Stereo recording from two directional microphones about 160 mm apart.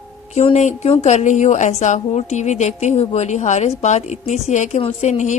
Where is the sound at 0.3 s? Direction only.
45° left (ahead or behind).